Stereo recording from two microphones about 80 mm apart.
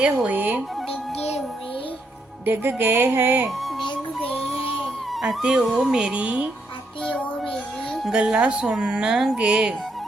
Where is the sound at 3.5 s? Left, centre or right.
Centre.